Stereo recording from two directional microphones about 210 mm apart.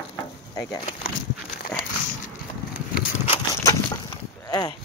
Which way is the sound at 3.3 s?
20° left (ahead or behind).